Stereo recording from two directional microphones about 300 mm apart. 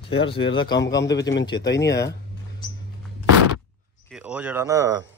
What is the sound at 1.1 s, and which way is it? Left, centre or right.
Speech, left.